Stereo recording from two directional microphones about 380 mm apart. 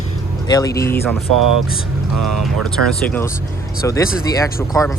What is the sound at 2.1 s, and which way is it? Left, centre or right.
Speech, right.